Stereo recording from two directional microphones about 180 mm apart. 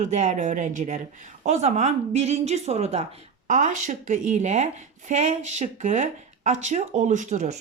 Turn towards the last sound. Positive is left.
turn(degrees=-40)  # may be behind; listen again after turning